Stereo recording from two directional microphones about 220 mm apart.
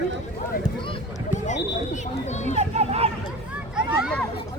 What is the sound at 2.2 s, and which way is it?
Children playing, 30° left (ahead or behind).